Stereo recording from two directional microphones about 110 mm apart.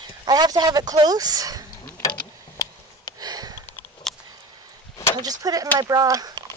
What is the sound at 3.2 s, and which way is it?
Sniff, 35° right (ahead or behind).